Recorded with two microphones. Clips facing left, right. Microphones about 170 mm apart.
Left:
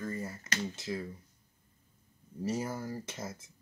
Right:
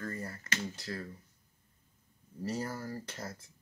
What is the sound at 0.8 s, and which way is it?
Speech, 20° left (ahead or behind).